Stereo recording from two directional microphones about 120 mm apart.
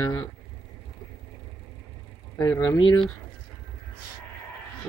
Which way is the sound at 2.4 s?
25° left (ahead or behind).